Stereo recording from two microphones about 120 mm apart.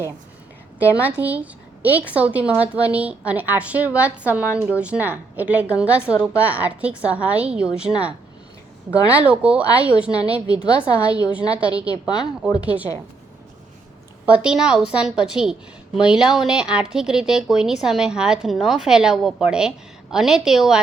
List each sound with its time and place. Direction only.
0.8 s a woman's voice: 15° right (ahead or behind)
11.9 s a woman's voice: 35° left (ahead or behind)
12.5 s a woman's voice: 10° right (ahead or behind)
14.3 s a woman's voice: 10° right (ahead or behind)